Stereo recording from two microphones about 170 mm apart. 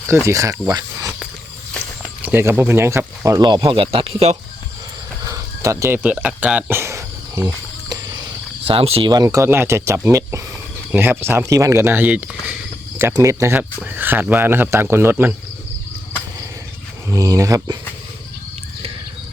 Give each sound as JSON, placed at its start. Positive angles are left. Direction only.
{"t": 0.3, "sound": "speech", "side_deg": -20}
{"t": 2.2, "sound": "speech", "side_deg": -10}
{"t": 5.2, "sound": "cricket", "side_deg": -20}
{"t": 8.6, "sound": "speech", "side_deg": -35}
{"t": 17.1, "sound": "speech", "side_deg": -20}